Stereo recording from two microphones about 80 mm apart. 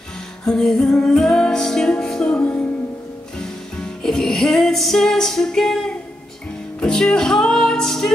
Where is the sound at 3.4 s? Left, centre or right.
Centre.